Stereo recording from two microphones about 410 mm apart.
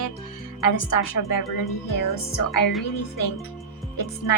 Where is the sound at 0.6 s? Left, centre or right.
Left.